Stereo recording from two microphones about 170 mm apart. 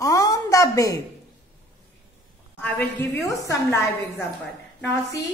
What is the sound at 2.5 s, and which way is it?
A woman's voice, 10° left (ahead or behind).